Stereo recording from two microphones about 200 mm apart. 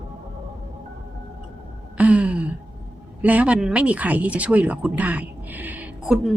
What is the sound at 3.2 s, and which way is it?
Speech, 5° right (ahead or behind).